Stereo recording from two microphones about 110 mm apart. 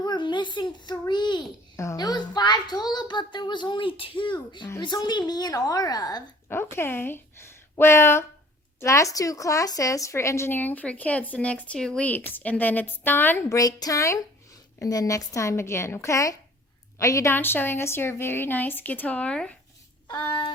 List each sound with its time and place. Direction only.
0.0 s a child's voice: 45° left (ahead or behind)
1.7 s a woman's voice: 25° left (ahead or behind)
6.5 s a woman's voice: 20° left (ahead or behind)
13.6 s a woman's voice: 35° left (ahead or behind)
17.3 s a woman's voice: 20° left (ahead or behind)
20.2 s a woman's voice: 45° left (ahead or behind)